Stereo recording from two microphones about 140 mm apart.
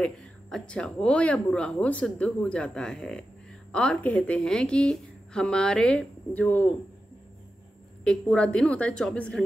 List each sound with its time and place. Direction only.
0.0 s a woman's voice: 5° left (ahead or behind)
8.0 s speech: 5° left (ahead or behind)